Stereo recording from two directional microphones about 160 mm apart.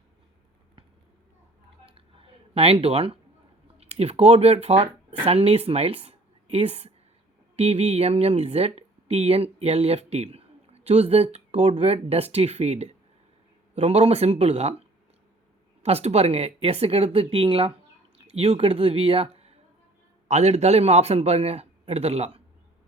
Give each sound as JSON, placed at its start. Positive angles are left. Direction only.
{"t": 2.6, "sound": "a man's voice", "side_deg": -40}